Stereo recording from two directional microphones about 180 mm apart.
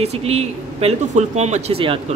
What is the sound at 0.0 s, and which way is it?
Speech, 35° right (ahead or behind).